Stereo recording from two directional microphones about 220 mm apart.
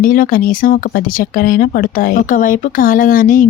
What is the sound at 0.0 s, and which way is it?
Speech, 40° left (ahead or behind).